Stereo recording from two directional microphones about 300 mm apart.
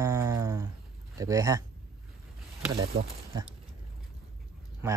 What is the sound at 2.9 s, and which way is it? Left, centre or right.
Speech, right.